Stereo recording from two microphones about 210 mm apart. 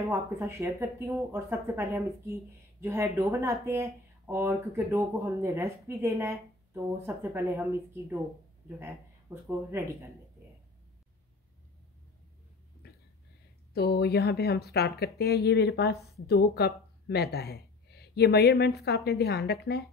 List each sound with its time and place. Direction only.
0.0 s speech: 10° right (ahead or behind)
12.8 s a sound: 50° left (ahead or behind)
13.7 s speech: 50° left (ahead or behind)